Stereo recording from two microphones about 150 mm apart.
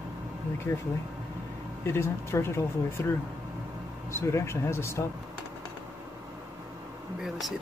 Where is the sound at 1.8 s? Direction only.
15° left (ahead or behind).